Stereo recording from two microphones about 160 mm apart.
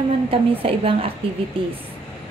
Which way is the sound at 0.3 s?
35° right (ahead or behind).